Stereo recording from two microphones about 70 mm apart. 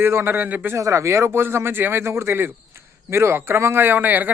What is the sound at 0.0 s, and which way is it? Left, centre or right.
Speech, right.